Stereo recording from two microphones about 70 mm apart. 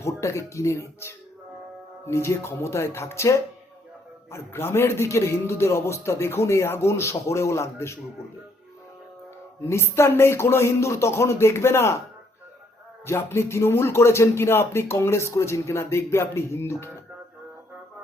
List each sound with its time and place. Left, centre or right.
0.0 s speech: left
9.6 s speech: left
13.1 s speech: left